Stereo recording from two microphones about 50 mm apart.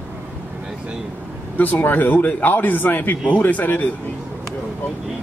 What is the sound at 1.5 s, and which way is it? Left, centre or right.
Speech, left.